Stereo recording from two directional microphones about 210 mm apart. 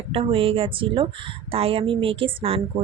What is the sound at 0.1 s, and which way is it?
A woman's voice, 25° right (ahead or behind).